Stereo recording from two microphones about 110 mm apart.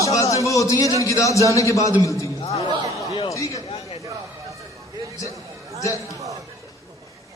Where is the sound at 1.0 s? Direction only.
30° left (ahead or behind).